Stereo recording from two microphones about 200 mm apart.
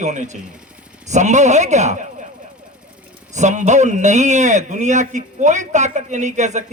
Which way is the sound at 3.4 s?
35° right (ahead or behind).